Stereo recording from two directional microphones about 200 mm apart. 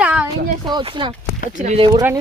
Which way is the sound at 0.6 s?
20° right (ahead or behind).